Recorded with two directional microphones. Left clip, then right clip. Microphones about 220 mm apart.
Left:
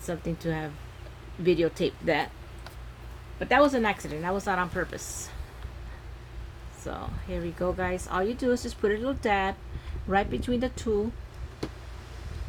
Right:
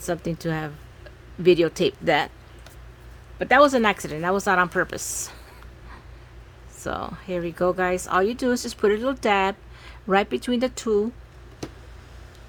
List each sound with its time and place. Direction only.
0.0 s speech: 50° right (ahead or behind)
3.3 s speech: 50° right (ahead or behind)
6.8 s speech: 50° right (ahead or behind)